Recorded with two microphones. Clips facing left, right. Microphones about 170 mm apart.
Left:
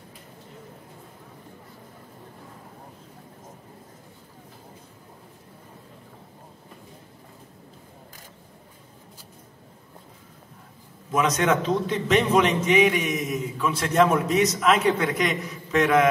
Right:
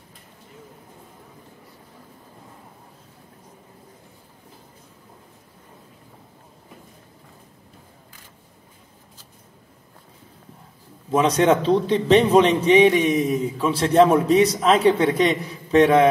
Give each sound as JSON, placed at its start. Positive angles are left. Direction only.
{"t": 11.1, "sound": "a man's voice", "side_deg": -30}